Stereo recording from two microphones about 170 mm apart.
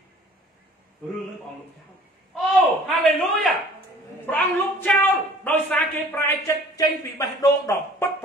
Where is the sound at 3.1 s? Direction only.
Centre (ahead or behind).